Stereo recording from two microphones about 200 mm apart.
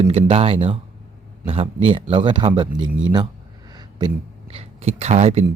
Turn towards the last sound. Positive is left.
turn(degrees=-30)  # may be behind; listen again after turning